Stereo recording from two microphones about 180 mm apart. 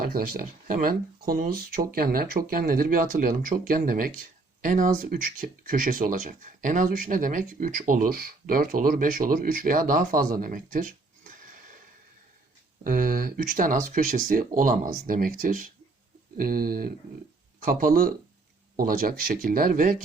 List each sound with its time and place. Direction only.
0.0 s speech: 55° right (ahead or behind)
12.8 s speech: 50° right (ahead or behind)